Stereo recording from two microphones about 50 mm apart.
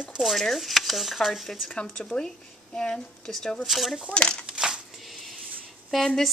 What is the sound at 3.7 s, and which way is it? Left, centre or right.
Speech, centre.